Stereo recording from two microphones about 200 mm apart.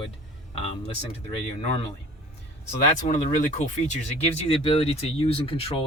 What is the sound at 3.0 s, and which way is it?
Speech, 35° left (ahead or behind).